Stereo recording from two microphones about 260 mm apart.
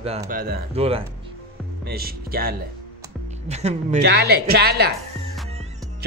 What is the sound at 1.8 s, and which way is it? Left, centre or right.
Speech, right.